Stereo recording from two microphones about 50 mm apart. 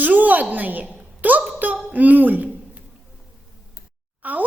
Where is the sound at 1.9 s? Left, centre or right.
Right.